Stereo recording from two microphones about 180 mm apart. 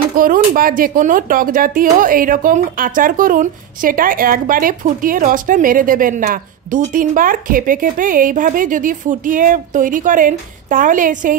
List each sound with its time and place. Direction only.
0.1 s speech: 50° right (ahead or behind)